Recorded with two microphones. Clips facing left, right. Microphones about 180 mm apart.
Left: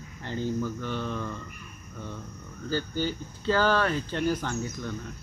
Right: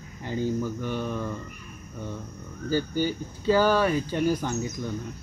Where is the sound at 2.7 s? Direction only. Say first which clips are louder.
Right 4 dB; 10° right (ahead or behind).